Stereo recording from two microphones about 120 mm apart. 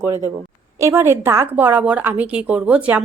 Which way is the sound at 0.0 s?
20° right (ahead or behind).